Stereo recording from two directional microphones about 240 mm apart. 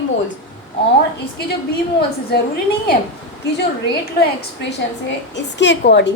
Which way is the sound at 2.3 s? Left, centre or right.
Left.